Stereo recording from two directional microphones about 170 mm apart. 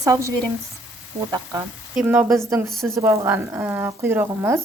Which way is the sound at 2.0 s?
10° right (ahead or behind).